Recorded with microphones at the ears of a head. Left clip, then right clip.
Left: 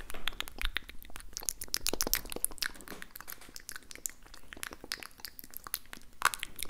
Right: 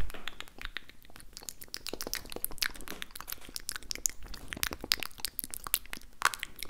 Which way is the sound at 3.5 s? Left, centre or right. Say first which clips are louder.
Right 9 dB; right.